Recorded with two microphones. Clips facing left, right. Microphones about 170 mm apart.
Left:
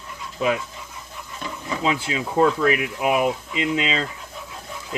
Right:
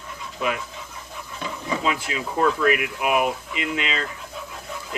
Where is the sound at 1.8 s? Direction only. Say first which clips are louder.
Left 6 dB; 30° left (ahead or behind).